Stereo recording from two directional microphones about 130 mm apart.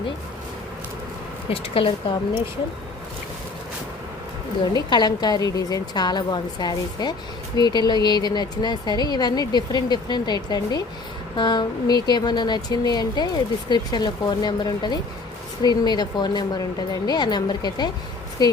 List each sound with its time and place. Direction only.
1.5 s speech: 45° left (ahead or behind)
4.7 s speech: 35° left (ahead or behind)